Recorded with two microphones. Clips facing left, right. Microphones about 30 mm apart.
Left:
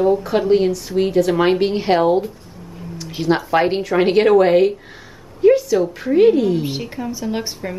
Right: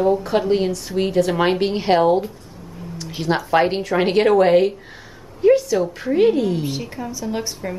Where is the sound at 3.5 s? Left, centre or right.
Centre.